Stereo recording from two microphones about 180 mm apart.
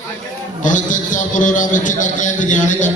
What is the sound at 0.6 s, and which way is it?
A man's voice, 45° left (ahead or behind).